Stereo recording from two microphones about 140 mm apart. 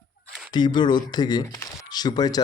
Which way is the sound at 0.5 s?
30° left (ahead or behind).